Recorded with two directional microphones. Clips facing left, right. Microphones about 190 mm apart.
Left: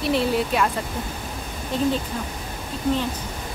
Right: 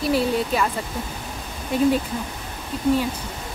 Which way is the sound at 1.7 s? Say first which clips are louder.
Right 4 dB; 10° right (ahead or behind).